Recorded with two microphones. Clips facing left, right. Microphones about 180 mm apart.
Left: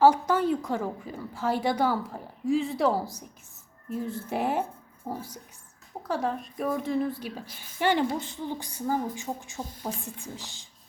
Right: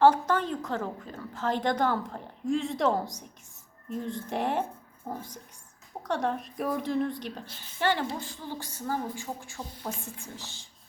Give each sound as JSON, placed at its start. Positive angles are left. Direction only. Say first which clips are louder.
{"t": 0.0, "sound": "a woman's voice", "louder": "left 1 dB", "side_deg": 10}
{"t": 7.8, "sound": "a woman's voice", "louder": "left 3 dB", "side_deg": 15}